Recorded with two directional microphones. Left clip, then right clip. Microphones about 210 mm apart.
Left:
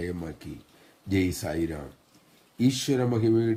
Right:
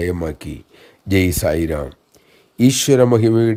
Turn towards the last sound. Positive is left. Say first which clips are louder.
# right 10 dB
turn(degrees=-45)  # may be behind; listen again after turning